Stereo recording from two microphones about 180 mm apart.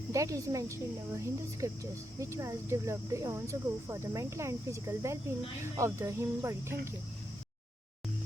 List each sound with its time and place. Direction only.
0.1 s speech: 20° right (ahead or behind)